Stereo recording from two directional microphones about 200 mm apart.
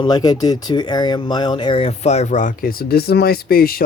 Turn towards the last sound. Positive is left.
turn(degrees=45)  # may be behind; listen again after turning